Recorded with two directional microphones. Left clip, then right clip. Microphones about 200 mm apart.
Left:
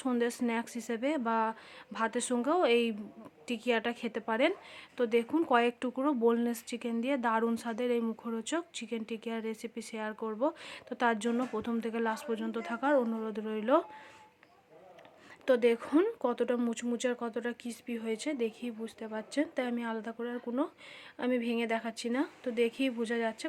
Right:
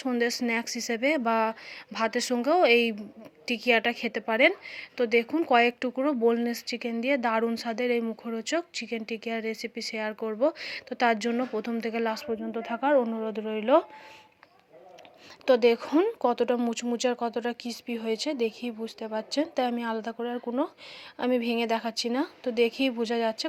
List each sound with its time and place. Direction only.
0.0 s a woman's voice: centre (ahead or behind)
15.4 s a woman's voice: 5° right (ahead or behind)